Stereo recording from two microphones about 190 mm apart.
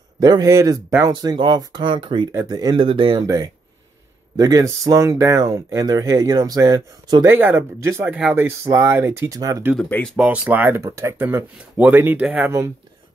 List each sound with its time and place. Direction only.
0.2 s speech: 20° right (ahead or behind)
9.8 s speech: 5° left (ahead or behind)
10.1 s speech: 5° right (ahead or behind)